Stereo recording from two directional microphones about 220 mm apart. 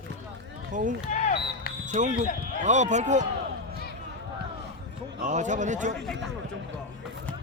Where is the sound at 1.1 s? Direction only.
30° left (ahead or behind).